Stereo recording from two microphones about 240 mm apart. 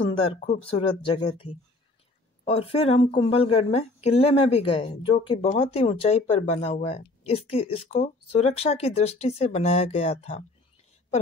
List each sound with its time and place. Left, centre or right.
0.4 s a woman's voice: left